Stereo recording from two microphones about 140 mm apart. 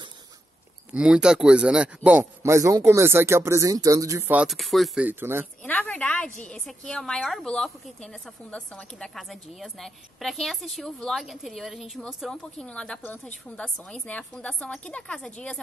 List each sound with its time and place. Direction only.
0.9 s a man's voice: 5° right (ahead or behind); by 4.3 s 20° right (ahead or behind)
4.3 s a woman's voice: 5° right (ahead or behind)
5.0 s a man's voice: 15° right (ahead or behind)
5.6 s a sound: 10° left (ahead or behind)
6.4 s a woman's voice: 5° left (ahead or behind)